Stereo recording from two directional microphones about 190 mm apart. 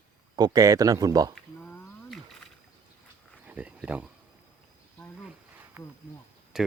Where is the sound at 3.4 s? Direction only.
5° right (ahead or behind).